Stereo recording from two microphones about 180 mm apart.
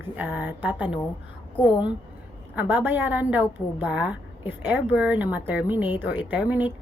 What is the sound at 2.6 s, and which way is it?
A woman's voice, 10° right (ahead or behind).